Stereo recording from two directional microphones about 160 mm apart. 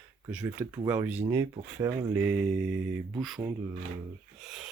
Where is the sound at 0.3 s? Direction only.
10° right (ahead or behind).